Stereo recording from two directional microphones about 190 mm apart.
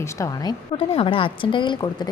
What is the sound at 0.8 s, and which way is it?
A woman's voice, 30° left (ahead or behind).